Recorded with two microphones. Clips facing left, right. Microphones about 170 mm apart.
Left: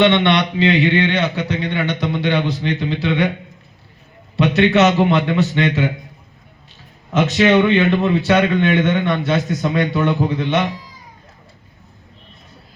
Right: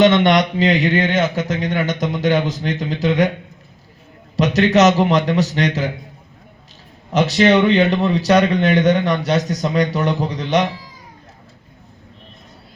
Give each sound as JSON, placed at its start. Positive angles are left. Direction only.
{"t": 0.0, "sound": "a man's voice", "side_deg": -40}
{"t": 4.4, "sound": "a man's voice", "side_deg": -40}
{"t": 7.1, "sound": "a man's voice", "side_deg": -35}